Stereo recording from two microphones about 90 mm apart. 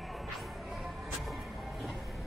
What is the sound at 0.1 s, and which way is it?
Music, centre (ahead or behind).